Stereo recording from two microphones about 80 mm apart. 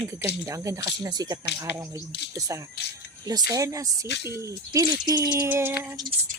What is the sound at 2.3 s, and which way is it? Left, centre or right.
Speech, right.